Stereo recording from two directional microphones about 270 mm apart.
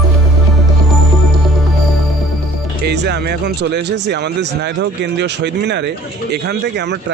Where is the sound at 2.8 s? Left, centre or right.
Right.